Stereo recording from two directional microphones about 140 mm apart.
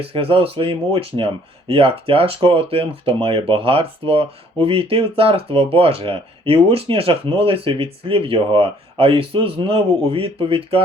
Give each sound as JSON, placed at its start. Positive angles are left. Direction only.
{"t": 0.0, "sound": "speech", "side_deg": -45}